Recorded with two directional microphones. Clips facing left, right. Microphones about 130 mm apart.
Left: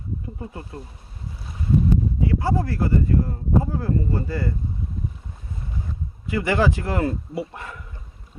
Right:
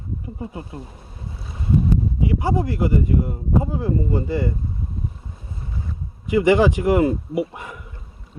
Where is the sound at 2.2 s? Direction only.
15° right (ahead or behind).